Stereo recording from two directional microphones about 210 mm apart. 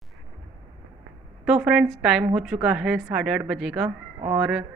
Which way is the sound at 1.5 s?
5° right (ahead or behind).